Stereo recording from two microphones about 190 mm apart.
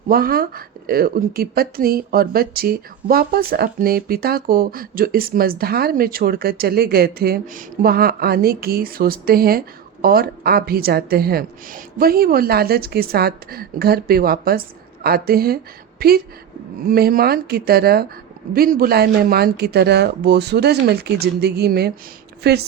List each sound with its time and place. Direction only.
0.1 s speech: 50° right (ahead or behind)